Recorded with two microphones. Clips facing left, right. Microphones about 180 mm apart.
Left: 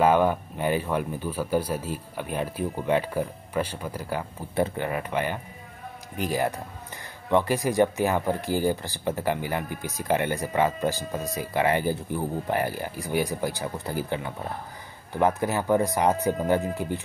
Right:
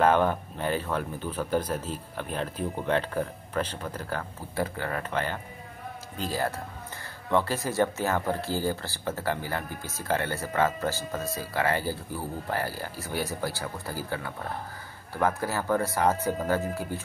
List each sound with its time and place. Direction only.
0.0 s a man's voice: 10° left (ahead or behind)